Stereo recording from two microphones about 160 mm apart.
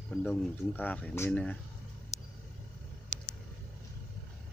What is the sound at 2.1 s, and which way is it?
Vehicle, 45° left (ahead or behind).